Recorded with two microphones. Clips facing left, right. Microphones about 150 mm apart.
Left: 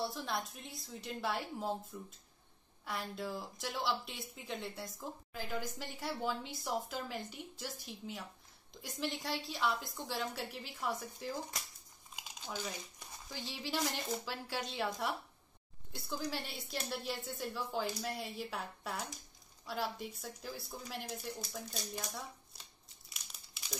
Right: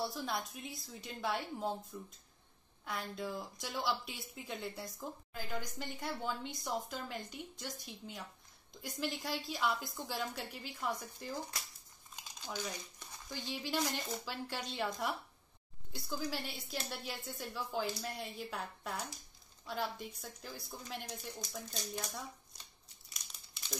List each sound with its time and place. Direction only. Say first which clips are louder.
0.0 s speech: even; centre (ahead or behind)
13.3 s a woman's voice: right 1 dB; 5° left (ahead or behind)